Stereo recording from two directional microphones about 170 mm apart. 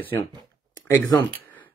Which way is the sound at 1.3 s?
10° left (ahead or behind).